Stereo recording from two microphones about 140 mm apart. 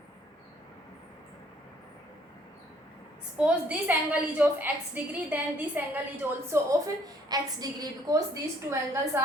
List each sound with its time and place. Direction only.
3.3 s a woman's voice: 10° right (ahead or behind)
6.5 s a woman's voice: 25° right (ahead or behind)